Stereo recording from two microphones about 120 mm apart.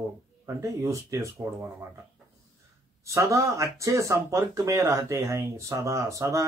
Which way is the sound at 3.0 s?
25° right (ahead or behind).